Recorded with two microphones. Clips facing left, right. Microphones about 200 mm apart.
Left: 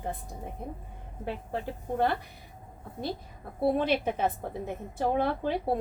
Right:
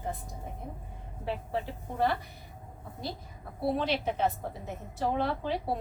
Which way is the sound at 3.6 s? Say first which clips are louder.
Left 4 dB; 55° left (ahead or behind).